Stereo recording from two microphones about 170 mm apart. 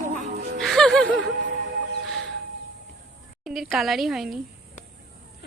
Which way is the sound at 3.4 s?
Centre (ahead or behind).